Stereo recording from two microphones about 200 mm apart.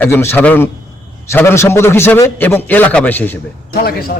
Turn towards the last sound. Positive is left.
turn(degrees=50)  # may be behind; listen again after turning